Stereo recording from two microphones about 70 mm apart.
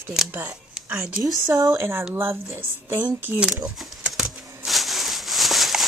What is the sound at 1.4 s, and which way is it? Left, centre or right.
Speech, right.